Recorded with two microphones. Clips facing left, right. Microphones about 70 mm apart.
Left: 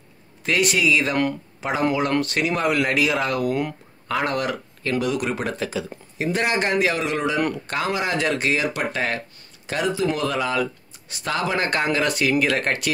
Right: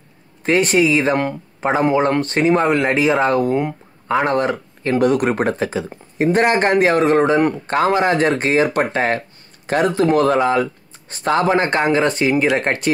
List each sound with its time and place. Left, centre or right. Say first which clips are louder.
0.4 s speech: right 6 dB; right
5.0 s speech: right 12 dB; right
9.7 s speech: right 7 dB; right